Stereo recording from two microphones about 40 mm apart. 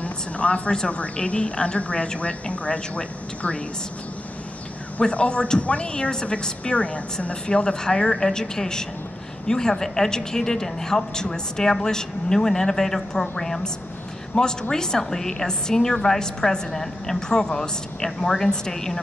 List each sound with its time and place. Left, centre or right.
0.0 s a woman's voice: left
5.1 s a woman's voice: left; by 18.9 s centre